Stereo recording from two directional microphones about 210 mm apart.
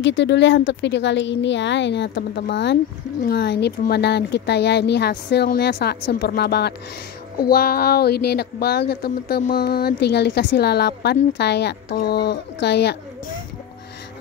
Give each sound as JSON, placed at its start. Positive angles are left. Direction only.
{"t": 0.0, "sound": "a woman's voice", "side_deg": 60}